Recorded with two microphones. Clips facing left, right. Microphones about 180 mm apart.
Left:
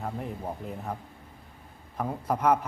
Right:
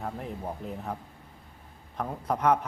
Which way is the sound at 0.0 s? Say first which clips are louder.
Left 1 dB; centre (ahead or behind).